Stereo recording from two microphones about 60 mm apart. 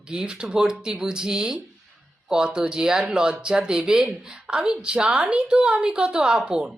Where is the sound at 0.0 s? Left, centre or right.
Centre.